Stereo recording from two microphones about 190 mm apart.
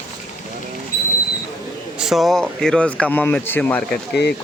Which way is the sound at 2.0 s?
Centre (ahead or behind).